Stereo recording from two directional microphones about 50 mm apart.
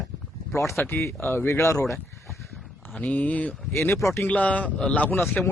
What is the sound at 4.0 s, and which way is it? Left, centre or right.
Speech, left.